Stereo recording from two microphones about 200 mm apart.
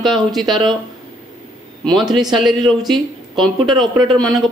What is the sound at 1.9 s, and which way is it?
Speech, centre (ahead or behind).